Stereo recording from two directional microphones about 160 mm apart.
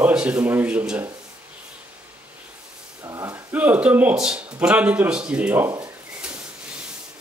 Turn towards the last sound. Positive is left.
turn(degrees=-20)  # may be behind; listen again after turning